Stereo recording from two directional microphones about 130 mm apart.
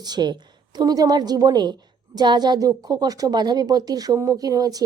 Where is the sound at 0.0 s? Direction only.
35° right (ahead or behind).